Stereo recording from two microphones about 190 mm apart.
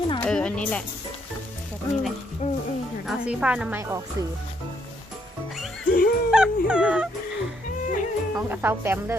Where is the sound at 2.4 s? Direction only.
35° left (ahead or behind).